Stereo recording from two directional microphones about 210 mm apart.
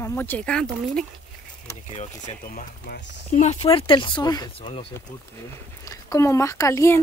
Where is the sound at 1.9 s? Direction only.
35° left (ahead or behind).